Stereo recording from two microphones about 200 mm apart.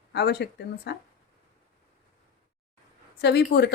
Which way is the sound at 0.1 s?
55° left (ahead or behind).